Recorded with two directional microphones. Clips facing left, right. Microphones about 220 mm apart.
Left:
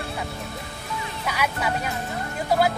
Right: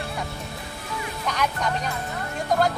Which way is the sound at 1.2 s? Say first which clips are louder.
Even; 5° left (ahead or behind).